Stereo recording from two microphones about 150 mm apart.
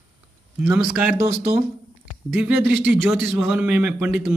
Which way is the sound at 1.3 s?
50° right (ahead or behind).